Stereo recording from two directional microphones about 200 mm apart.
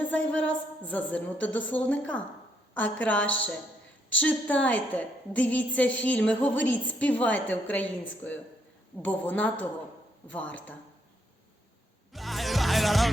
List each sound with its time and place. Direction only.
0.1 s a woman's voice: 5° left (ahead or behind)
3.2 s a woman's voice: 70° left (ahead or behind)
4.2 s a woman's voice: 5° left (ahead or behind)
12.1 s music: centre (ahead or behind)